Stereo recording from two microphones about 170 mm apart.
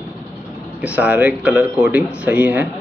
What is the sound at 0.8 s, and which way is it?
Speech, 10° right (ahead or behind).